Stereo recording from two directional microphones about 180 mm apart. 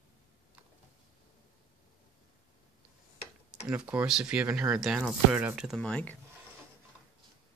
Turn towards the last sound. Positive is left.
turn(degrees=5)  # may be behind; listen again after turning